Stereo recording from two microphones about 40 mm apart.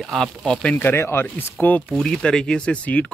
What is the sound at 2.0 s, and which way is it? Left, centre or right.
Speech, centre.